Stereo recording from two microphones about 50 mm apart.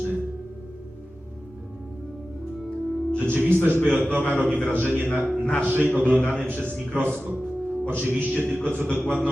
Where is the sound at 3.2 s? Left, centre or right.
Right.